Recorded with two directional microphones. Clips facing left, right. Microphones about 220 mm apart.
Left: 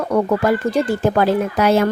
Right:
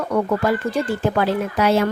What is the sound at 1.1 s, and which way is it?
Speech, 45° left (ahead or behind).